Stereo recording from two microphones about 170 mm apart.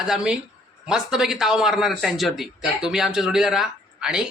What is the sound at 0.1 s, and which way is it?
A man's voice, 5° right (ahead or behind).